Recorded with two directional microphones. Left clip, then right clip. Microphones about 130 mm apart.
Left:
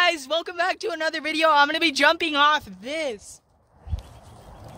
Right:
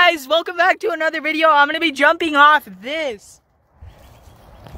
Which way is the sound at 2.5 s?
75° right (ahead or behind).